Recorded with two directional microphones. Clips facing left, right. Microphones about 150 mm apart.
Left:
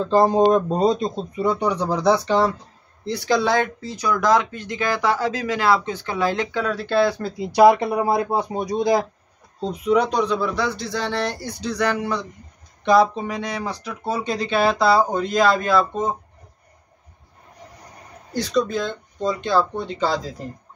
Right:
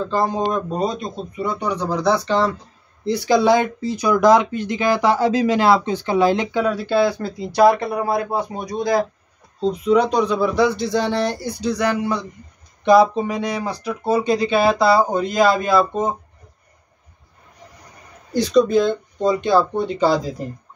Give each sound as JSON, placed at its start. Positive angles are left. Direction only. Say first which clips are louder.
{"t": 0.1, "sound": "speech", "louder": "left 7 dB", "side_deg": 35}
{"t": 3.1, "sound": "speech", "louder": "right 5 dB", "side_deg": -15}
{"t": 7.3, "sound": "speech", "louder": "left 1 dB", "side_deg": 15}
{"t": 9.6, "sound": "speech", "louder": "right 3 dB", "side_deg": 5}
{"t": 18.3, "sound": "speech", "louder": "right 6 dB", "side_deg": -20}